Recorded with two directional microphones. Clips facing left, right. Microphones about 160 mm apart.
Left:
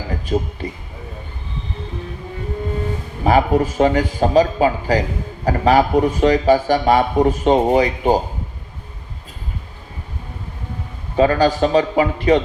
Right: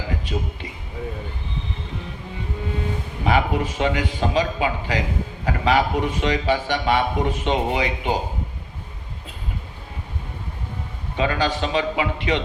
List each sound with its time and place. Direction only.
0.1 s speech: 40° left (ahead or behind)
3.2 s a man's voice: 40° left (ahead or behind)
11.2 s a man's voice: 40° left (ahead or behind)